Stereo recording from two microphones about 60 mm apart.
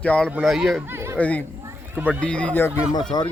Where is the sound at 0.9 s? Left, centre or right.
Right.